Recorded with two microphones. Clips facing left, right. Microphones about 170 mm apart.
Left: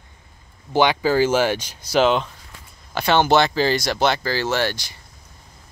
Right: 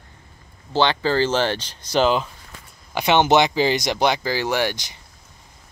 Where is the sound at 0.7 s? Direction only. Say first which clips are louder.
Left 2 dB; 10° left (ahead or behind).